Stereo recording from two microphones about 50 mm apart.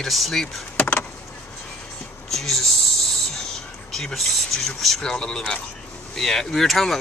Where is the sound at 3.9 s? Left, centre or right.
Centre.